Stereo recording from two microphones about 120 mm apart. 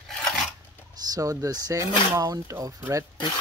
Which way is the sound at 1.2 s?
30° right (ahead or behind).